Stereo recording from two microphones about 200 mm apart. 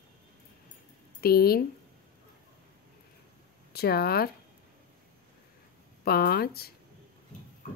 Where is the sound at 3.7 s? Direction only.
50° left (ahead or behind).